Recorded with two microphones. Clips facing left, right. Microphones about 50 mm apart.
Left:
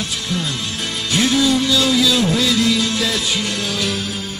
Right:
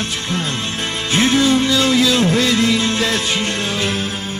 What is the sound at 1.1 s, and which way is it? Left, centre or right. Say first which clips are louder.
Music: right 2 dB; right.